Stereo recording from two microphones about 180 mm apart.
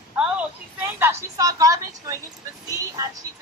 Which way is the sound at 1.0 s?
15° right (ahead or behind).